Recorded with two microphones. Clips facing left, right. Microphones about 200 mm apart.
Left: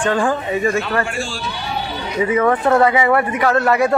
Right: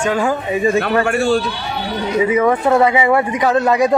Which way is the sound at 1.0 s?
60° right (ahead or behind).